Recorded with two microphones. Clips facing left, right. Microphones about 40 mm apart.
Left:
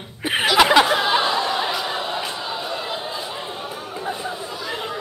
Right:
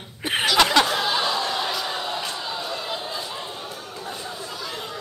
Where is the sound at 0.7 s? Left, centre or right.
Centre.